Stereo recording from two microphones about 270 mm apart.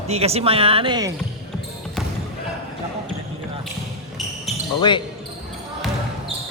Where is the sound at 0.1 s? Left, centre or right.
Right.